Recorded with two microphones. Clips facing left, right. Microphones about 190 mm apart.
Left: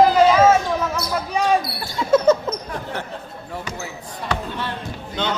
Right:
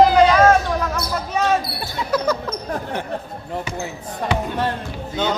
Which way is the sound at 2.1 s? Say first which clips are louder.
Left 6 dB; 25° left (ahead or behind).